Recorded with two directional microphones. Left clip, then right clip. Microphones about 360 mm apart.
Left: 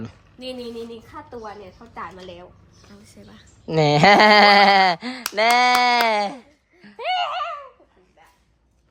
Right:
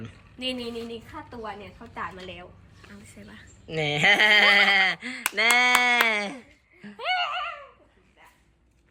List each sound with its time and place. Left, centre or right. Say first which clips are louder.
0.0 s a woman's voice: right 2 dB; centre
2.1 s speech: left 2 dB; centre
3.7 s speech: left 7 dB; left
4.9 s speech: left 4 dB; centre
7.0 s laughter: left 4 dB; left